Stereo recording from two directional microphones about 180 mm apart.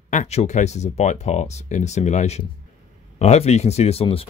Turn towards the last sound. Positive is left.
turn(degrees=35)  # may be behind; listen again after turning